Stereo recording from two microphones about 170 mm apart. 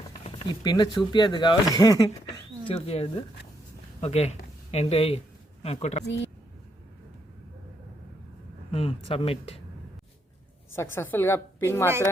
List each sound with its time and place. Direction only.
0.3 s a sound: 35° left (ahead or behind)
0.6 s speech: 25° left (ahead or behind)
2.6 s speech: 35° left (ahead or behind)
8.7 s speech: 35° left (ahead or behind)
10.8 s a woman's voice: 15° left (ahead or behind)